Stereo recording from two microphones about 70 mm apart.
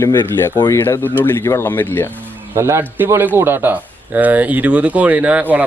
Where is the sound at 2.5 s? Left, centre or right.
Right.